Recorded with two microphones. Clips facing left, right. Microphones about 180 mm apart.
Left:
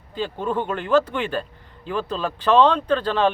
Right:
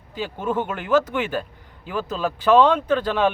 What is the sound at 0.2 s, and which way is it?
Speech, 10° right (ahead or behind).